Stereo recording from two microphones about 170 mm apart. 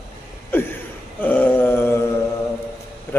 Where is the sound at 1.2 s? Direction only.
10° left (ahead or behind).